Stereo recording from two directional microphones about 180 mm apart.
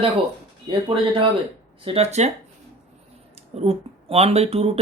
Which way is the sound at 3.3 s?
35° right (ahead or behind).